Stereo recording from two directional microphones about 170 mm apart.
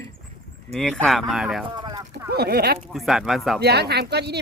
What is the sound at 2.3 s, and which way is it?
Speech, 65° right (ahead or behind).